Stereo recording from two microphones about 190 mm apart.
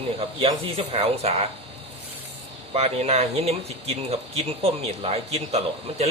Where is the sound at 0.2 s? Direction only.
30° right (ahead or behind).